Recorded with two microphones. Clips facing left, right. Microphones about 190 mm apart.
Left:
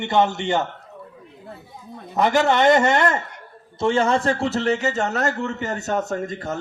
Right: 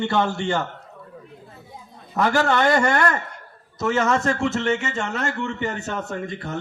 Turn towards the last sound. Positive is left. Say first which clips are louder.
# left 3 dB
turn(degrees=40)  # may be behind; listen again after turning